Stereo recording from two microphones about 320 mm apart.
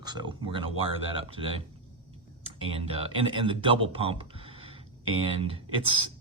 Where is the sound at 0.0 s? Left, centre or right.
Centre.